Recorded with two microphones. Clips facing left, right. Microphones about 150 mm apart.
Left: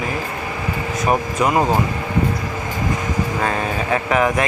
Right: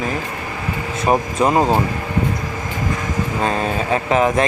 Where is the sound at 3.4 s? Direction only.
20° right (ahead or behind).